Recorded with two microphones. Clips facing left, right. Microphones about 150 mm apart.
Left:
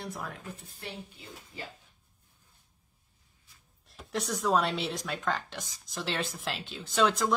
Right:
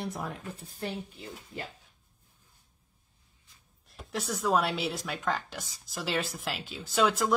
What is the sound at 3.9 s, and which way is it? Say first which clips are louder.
Speech: left 1 dB; centre (ahead or behind).